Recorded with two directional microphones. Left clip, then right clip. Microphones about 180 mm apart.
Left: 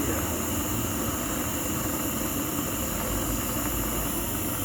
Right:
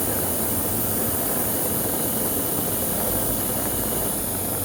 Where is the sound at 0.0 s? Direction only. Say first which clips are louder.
Right 2 dB; 45° right (ahead or behind).